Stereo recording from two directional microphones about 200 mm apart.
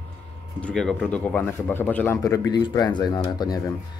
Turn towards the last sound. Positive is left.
turn(degrees=20)  # may be behind; listen again after turning